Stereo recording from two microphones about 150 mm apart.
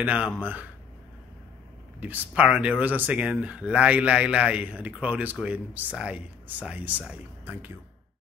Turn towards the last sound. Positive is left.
turn(degrees=-10)  # may be behind; listen again after turning